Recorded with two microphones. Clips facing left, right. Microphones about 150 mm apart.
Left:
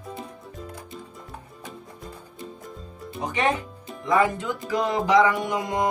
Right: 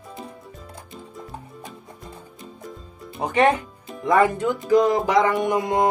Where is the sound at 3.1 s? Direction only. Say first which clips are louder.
Right 6 dB; 60° right (ahead or behind).